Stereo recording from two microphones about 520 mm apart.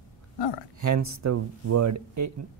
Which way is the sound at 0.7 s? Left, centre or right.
Right.